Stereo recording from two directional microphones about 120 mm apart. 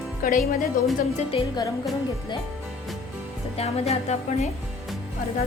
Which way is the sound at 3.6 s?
60° left (ahead or behind).